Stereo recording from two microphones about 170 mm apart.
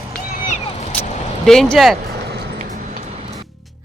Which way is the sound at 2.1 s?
75° right (ahead or behind).